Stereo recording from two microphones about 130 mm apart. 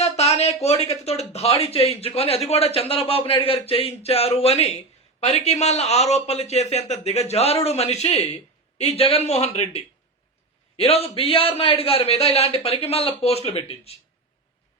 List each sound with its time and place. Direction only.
0.0 s a man's voice: 55° left (ahead or behind)